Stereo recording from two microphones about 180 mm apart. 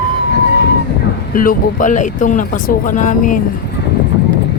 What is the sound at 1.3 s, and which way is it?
Speech, 50° left (ahead or behind).